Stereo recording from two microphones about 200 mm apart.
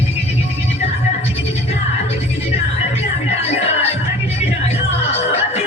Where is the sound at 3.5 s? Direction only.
30° left (ahead or behind).